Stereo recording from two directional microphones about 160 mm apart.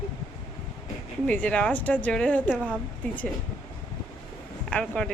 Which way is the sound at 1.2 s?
10° left (ahead or behind).